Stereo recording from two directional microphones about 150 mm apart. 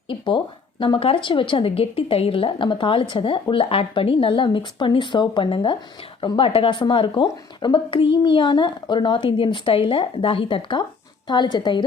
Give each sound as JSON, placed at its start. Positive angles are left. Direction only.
{"t": 0.1, "sound": "a woman's voice", "side_deg": 35}